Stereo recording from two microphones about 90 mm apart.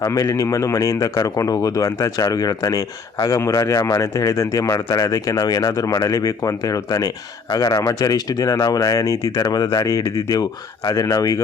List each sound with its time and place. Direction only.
0.0 s speech: 40° left (ahead or behind)